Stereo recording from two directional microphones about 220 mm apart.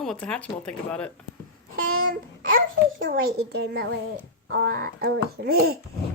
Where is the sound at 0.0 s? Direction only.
5° left (ahead or behind).